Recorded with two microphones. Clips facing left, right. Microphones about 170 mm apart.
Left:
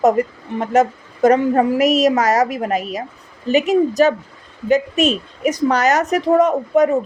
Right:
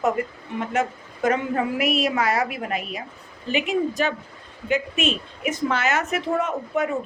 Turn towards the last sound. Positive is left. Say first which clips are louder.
# left 10 dB
turn(degrees=40)  # may be behind; listen again after turning